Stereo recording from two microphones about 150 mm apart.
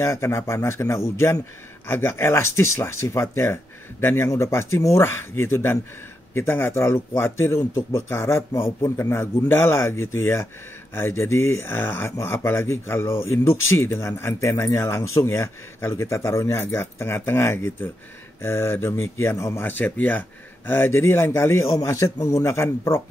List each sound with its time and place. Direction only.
0.0 s speech: 15° left (ahead or behind)